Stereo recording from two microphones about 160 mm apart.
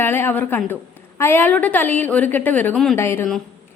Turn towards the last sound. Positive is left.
turn(degrees=15)  # may be behind; listen again after turning